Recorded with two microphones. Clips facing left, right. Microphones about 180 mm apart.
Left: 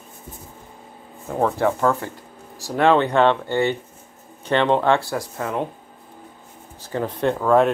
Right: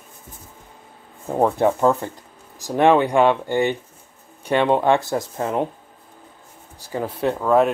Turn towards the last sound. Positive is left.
turn(degrees=-5)  # may be behind; listen again after turning